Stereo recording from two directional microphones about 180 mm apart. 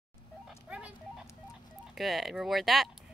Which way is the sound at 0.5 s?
5° right (ahead or behind).